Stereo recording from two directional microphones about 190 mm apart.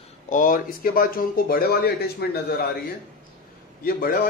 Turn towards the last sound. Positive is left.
turn(degrees=50)  # may be behind; listen again after turning